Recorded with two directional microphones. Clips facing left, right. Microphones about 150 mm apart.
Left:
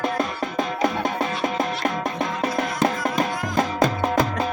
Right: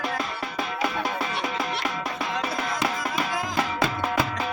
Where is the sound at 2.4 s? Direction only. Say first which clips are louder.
Left 7 dB; 45° left (ahead or behind).